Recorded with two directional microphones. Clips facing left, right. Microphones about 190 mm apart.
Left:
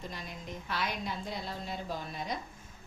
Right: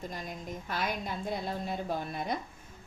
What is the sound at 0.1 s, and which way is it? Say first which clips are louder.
A woman's voice: right 3 dB; 45° right (ahead or behind).